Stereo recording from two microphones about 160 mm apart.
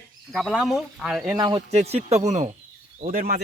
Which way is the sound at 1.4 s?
30° right (ahead or behind).